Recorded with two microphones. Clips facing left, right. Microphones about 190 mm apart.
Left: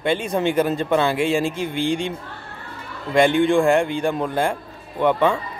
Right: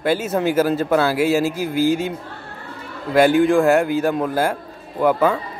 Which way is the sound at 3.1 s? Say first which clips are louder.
Right 2 dB; 5° right (ahead or behind).